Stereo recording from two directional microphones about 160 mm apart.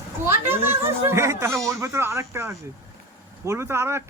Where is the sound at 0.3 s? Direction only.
15° right (ahead or behind).